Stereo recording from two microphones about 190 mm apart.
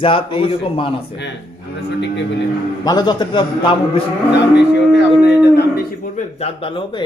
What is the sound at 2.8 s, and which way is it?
A man's voice, 20° left (ahead or behind).